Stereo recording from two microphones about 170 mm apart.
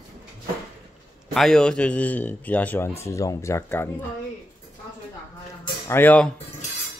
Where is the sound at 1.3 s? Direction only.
5° left (ahead or behind).